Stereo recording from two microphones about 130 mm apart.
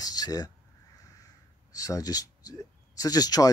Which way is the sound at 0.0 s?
30° left (ahead or behind).